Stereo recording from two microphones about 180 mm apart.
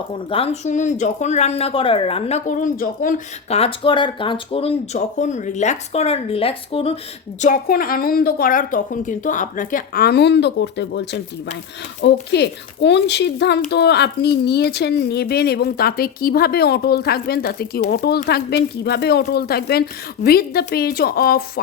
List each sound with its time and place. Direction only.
0.1 s speech: 30° left (ahead or behind); by 3.2 s 50° left (ahead or behind)
3.5 s speech: 30° left (ahead or behind)
7.4 s a woman's voice: 50° left (ahead or behind); by 11.2 s 75° left (ahead or behind)
12.3 s a woman's voice: 70° left (ahead or behind)